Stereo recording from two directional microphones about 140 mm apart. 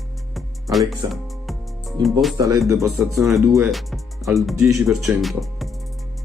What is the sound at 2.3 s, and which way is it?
Speech, 25° right (ahead or behind).